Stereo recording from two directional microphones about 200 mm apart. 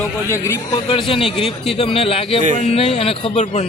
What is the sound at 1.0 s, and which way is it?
Speech, 25° left (ahead or behind).